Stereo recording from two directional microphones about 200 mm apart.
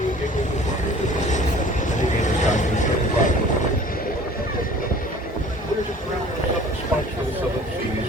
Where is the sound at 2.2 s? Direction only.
35° left (ahead or behind).